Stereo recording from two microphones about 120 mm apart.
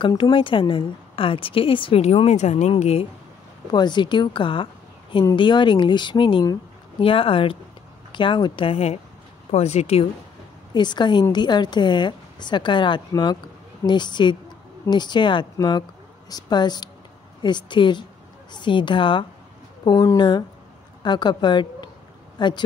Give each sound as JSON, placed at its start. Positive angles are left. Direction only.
{"t": 0.2, "sound": "a woman's voice", "side_deg": 45}
{"t": 2.7, "sound": "speech", "side_deg": 55}
{"t": 3.7, "sound": "a woman's voice", "side_deg": 40}
{"t": 10.7, "sound": "a woman's voice", "side_deg": 40}